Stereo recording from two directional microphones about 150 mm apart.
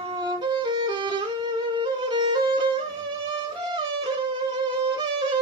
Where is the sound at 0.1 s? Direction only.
30° right (ahead or behind).